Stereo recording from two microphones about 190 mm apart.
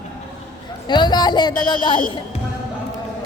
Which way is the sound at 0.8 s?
25° left (ahead or behind).